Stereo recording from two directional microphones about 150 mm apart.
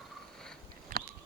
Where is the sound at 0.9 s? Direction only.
65° right (ahead or behind).